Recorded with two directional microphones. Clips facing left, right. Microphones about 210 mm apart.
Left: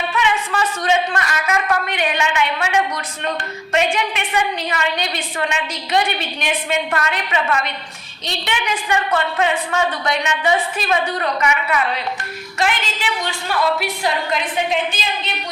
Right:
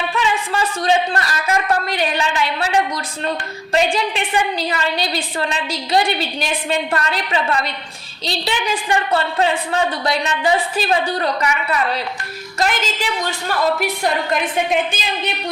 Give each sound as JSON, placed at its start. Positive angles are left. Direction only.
{"t": 0.2, "sound": "a woman's voice", "side_deg": -30}